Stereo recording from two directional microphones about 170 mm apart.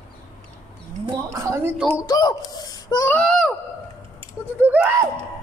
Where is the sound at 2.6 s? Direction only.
20° left (ahead or behind).